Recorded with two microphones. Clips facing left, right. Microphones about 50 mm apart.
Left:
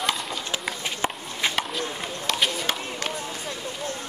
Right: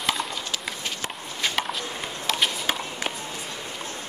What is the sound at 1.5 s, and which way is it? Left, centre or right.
Chop, centre.